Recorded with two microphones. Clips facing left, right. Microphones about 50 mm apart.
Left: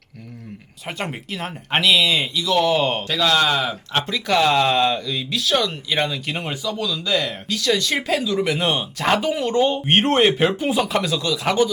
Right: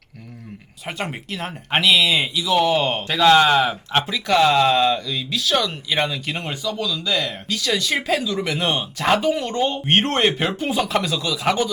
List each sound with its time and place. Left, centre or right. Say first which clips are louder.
0.9 s speech: even; centre
3.0 s speech: right 4 dB; centre
4.0 s speech: right 1 dB; centre